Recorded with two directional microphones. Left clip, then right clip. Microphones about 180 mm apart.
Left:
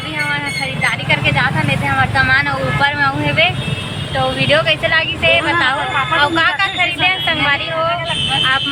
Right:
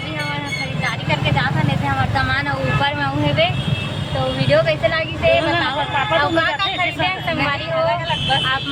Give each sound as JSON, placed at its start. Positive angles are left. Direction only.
{"t": 1.1, "sound": "vehicle", "side_deg": 20}
{"t": 2.1, "sound": "vehicle", "side_deg": 5}
{"t": 4.4, "sound": "speech", "side_deg": 5}